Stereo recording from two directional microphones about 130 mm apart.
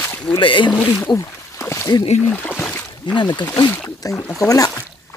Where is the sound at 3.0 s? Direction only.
35° left (ahead or behind).